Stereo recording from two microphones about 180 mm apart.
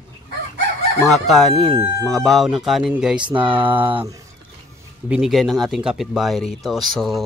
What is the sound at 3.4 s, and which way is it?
Speech, 30° right (ahead or behind).